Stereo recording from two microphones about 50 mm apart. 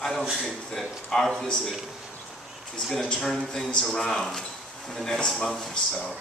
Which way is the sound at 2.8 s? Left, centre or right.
Centre.